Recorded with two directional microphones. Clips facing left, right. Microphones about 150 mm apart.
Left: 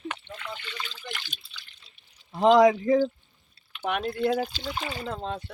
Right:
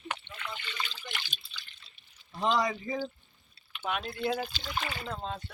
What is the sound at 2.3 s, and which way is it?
Speech, 90° left.